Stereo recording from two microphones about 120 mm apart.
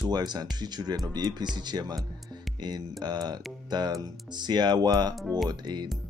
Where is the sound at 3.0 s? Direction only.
35° right (ahead or behind).